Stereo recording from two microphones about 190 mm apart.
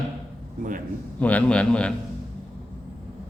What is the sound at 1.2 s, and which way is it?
Speech, 5° left (ahead or behind).